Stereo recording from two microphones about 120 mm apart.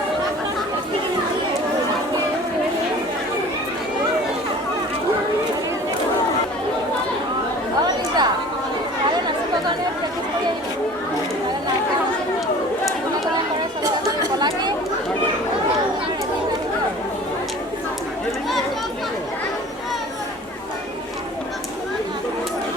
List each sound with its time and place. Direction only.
7.8 s chatter: 35° right (ahead or behind)
13.8 s chatter: 30° right (ahead or behind)